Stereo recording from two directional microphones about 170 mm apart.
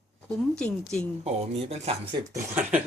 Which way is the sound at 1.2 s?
40° right (ahead or behind).